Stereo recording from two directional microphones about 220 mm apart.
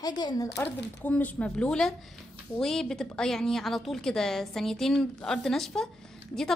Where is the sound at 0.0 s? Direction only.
20° left (ahead or behind).